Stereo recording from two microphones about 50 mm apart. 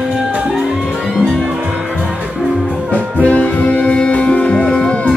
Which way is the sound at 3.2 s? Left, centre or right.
Left.